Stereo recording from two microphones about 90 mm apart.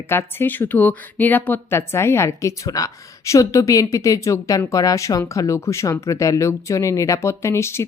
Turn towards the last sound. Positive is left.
turn(degrees=30)  # may be behind; listen again after turning